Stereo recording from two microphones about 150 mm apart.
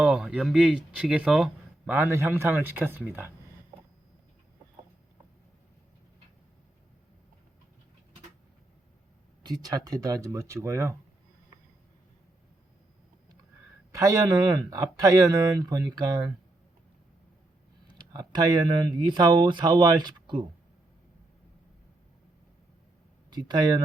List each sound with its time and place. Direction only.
0.0 s speech: 5° right (ahead or behind)
9.4 s speech: 25° right (ahead or behind)
13.9 s speech: 25° right (ahead or behind)
17.8 s speech: 30° right (ahead or behind)
23.3 s speech: 30° right (ahead or behind)